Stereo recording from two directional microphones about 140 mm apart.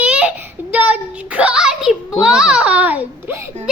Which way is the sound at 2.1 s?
5° right (ahead or behind).